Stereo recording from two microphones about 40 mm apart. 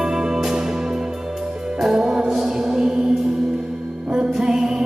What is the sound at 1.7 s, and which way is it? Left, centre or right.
Music, centre.